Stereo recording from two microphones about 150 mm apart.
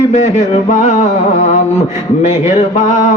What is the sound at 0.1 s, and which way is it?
Music, 50° left (ahead or behind).